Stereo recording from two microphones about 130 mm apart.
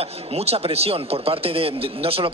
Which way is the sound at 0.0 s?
50° right (ahead or behind).